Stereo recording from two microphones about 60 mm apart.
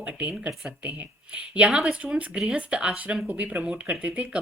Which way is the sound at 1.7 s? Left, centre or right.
Centre.